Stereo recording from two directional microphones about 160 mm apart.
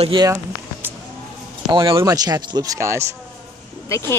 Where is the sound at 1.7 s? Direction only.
30° right (ahead or behind).